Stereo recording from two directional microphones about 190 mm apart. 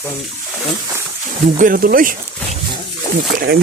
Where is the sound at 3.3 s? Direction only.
55° right (ahead or behind).